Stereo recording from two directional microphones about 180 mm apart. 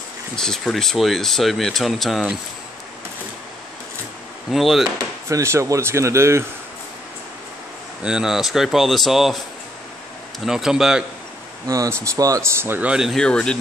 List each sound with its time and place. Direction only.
0.4 s speech: 5° left (ahead or behind)
4.5 s speech: centre (ahead or behind)
5.3 s speech: 15° right (ahead or behind)
8.0 s speech: 5° right (ahead or behind)
10.4 s speech: centre (ahead or behind)
11.6 s speech: 20° right (ahead or behind); by 13.6 s 5° left (ahead or behind)